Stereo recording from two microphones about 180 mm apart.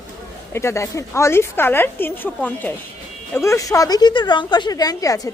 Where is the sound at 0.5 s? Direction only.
15° left (ahead or behind).